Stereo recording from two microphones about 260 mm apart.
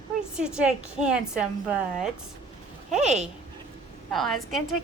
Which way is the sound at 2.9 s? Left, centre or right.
Right.